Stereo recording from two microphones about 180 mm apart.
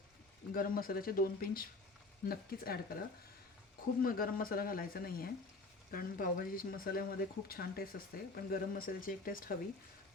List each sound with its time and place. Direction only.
0.5 s speech: 55° left (ahead or behind)
4.0 s speech: 55° left (ahead or behind)